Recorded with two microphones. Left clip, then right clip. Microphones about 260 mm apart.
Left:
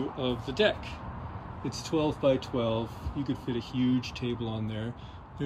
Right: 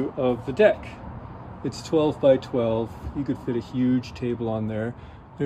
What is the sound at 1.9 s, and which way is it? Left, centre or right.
Speech, centre.